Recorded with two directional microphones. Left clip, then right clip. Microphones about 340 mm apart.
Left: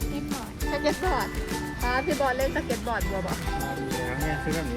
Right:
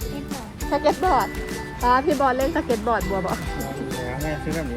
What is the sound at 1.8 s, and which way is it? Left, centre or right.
Speech, right.